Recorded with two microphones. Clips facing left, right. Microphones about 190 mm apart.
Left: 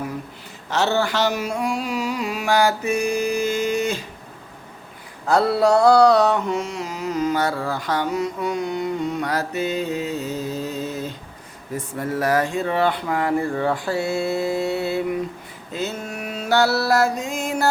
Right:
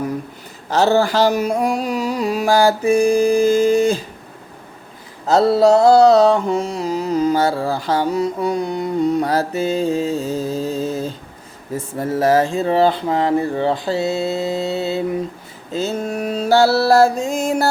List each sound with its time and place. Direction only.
0.7 s carnatic music: 35° right (ahead or behind)
5.2 s a sound: 25° right (ahead or behind)
5.9 s mantra: 25° right (ahead or behind)
17.2 s carnatic music: 40° right (ahead or behind)